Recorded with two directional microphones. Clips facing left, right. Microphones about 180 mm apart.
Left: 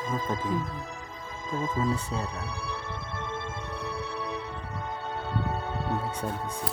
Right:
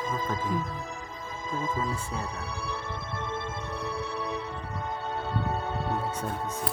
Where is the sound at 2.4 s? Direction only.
40° right (ahead or behind).